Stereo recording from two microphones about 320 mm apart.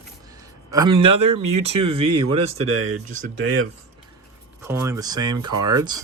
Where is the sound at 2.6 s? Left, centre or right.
Right.